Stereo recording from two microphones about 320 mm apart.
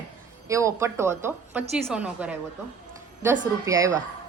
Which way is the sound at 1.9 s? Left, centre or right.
Centre.